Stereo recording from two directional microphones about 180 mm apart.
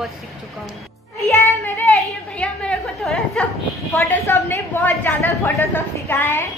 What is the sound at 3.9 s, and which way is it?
A woman's voice, 15° left (ahead or behind).